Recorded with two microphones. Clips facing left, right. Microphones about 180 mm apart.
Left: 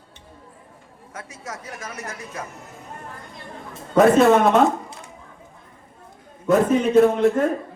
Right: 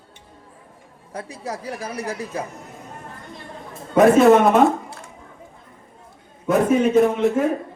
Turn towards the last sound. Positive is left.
turn(degrees=-5)  # may be behind; listen again after turning